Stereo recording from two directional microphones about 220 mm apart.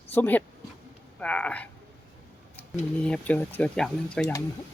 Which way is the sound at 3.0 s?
5° left (ahead or behind).